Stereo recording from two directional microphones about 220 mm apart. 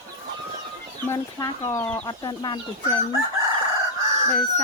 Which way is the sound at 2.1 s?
20° left (ahead or behind).